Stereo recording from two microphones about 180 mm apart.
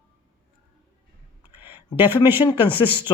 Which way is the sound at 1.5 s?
10° right (ahead or behind).